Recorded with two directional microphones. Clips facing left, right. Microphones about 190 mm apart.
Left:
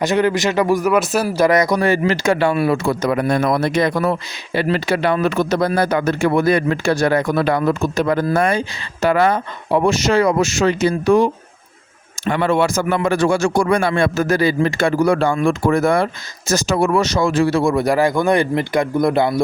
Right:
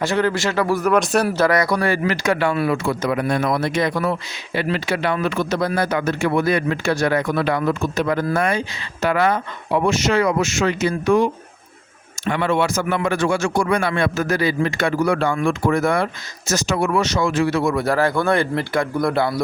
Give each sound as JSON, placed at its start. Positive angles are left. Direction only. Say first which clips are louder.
{"t": 0.0, "sound": "speech", "louder": "left 3 dB", "side_deg": 15}
{"t": 1.5, "sound": "speech", "louder": "left 3 dB", "side_deg": 20}
{"t": 17.8, "sound": "speech", "louder": "left 3 dB", "side_deg": 15}